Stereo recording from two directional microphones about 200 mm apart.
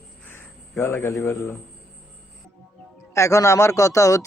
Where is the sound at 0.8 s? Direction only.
15° left (ahead or behind).